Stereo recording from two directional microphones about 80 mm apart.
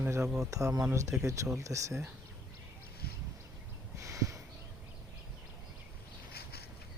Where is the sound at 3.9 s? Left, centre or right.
Right.